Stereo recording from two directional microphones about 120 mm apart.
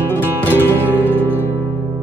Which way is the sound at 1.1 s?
15° right (ahead or behind).